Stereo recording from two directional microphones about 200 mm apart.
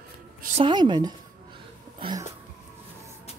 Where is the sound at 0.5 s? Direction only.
25° right (ahead or behind).